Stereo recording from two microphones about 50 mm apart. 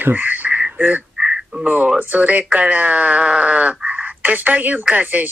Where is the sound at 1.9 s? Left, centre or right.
Right.